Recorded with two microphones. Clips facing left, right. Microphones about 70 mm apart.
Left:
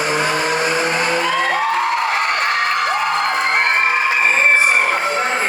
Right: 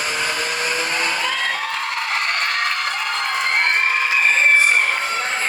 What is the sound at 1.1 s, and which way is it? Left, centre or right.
Music, left.